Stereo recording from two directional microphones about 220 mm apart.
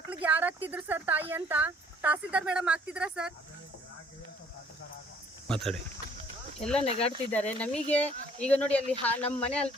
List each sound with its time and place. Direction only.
0.1 s speech: 5° right (ahead or behind)
5.5 s speech: centre (ahead or behind)
6.8 s speech: 30° left (ahead or behind)
7.3 s speech: 5° left (ahead or behind)